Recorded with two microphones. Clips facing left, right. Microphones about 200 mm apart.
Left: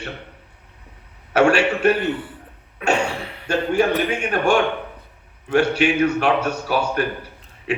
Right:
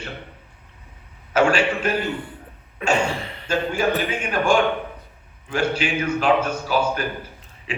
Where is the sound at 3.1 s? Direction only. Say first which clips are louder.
Right 1 dB; 5° left (ahead or behind).